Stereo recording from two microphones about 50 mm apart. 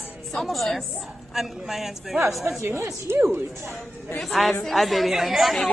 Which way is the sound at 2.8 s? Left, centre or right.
Right.